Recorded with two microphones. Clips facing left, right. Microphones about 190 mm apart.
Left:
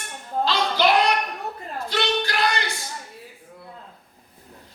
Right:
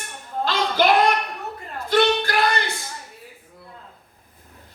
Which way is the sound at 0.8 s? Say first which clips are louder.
Right 2 dB; 50° right (ahead or behind).